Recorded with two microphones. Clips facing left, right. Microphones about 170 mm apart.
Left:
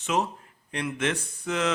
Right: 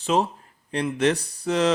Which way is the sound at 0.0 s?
35° right (ahead or behind).